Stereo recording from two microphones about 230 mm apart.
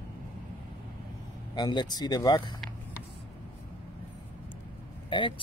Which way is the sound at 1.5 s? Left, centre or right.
Centre.